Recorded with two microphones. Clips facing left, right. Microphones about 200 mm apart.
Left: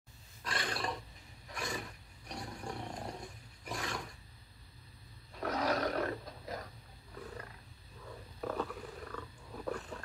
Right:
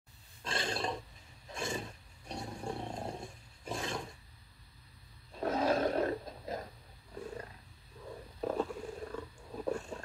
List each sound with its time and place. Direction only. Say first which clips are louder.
0.4 s roar: right 2 dB; 25° right (ahead or behind)
5.3 s roar: right 3 dB; 25° right (ahead or behind)
7.2 s wild animals: right 4 dB; 25° right (ahead or behind)
8.4 s purr: right 4 dB; 25° right (ahead or behind)